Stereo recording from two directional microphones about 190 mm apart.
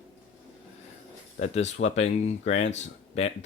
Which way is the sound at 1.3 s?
35° left (ahead or behind).